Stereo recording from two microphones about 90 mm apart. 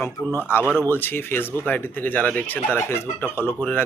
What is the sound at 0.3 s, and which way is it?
Speech, 25° left (ahead or behind).